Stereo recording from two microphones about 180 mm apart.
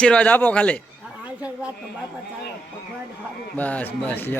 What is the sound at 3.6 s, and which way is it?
Speech, 10° left (ahead or behind).